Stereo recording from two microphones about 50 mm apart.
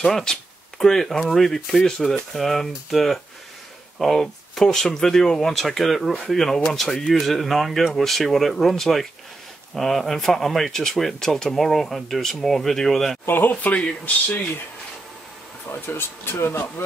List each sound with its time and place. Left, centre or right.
0.0 s speech: centre
13.3 s speech: left
15.7 s speech: left